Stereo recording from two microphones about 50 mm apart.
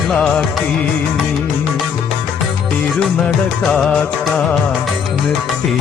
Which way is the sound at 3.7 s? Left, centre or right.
Centre.